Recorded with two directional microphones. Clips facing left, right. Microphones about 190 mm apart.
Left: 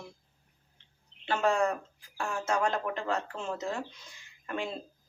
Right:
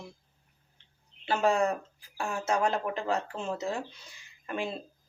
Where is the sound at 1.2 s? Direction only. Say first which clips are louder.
Right 1 dB; 10° right (ahead or behind).